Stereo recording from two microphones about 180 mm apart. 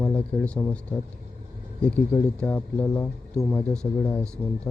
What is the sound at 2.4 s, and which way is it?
Speech, 10° left (ahead or behind).